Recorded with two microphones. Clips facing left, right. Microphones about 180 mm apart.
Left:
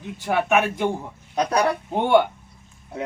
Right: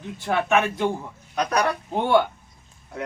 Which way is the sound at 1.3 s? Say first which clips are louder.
Left 2 dB; 30° left (ahead or behind).